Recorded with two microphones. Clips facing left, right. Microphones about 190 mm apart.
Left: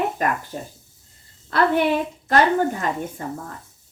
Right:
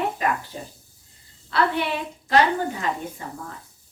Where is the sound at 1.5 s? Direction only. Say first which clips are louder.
Left 5 dB; 50° left (ahead or behind).